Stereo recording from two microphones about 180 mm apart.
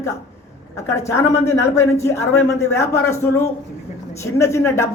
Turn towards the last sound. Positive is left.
turn(degrees=15)  # may be behind; listen again after turning